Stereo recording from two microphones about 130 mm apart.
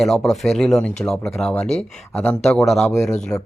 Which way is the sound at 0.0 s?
Centre (ahead or behind).